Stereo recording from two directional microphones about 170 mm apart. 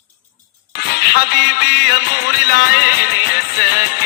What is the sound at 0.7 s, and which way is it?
Music, 65° left (ahead or behind).